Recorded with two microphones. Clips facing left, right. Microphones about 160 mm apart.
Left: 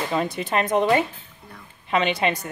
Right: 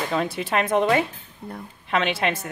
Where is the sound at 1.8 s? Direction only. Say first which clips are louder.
Left 2 dB; centre (ahead or behind).